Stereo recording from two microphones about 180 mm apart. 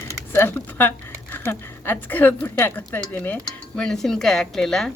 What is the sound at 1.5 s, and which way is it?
Speech, 15° left (ahead or behind).